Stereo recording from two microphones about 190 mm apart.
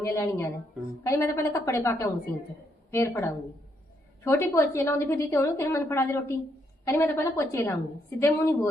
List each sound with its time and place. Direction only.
0.0 s a woman's voice: 15° left (ahead or behind)